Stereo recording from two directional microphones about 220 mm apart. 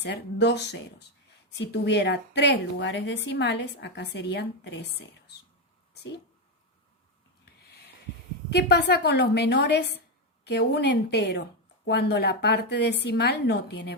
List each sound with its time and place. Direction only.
0.0 s a woman's voice: 50° left (ahead or behind)
5.9 s a sound: 50° left (ahead or behind)
8.4 s a woman's voice: 50° left (ahead or behind)